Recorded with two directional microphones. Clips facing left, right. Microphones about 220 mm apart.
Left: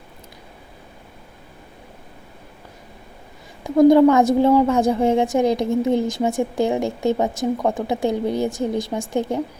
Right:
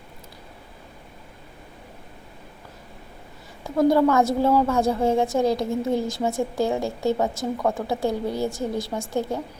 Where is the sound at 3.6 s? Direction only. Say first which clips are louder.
Left 7 dB; 15° left (ahead or behind).